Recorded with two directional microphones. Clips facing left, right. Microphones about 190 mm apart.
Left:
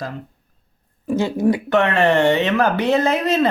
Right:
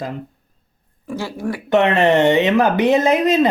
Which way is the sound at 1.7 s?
20° right (ahead or behind).